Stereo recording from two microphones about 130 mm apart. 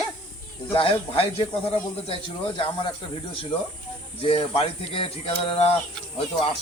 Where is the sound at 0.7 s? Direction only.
45° left (ahead or behind).